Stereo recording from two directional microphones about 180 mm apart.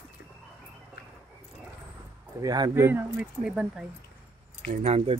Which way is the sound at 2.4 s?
20° right (ahead or behind).